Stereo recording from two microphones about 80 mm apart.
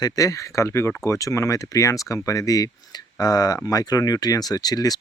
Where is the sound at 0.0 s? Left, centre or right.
Left.